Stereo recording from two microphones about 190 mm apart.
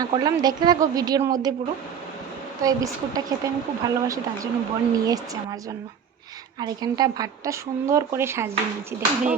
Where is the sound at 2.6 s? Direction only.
20° right (ahead or behind).